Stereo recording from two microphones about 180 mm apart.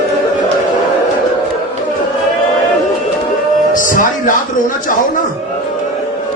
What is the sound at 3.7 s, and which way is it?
Music, 50° left (ahead or behind).